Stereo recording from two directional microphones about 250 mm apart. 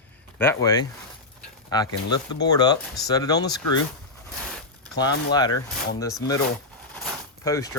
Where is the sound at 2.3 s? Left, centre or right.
Centre.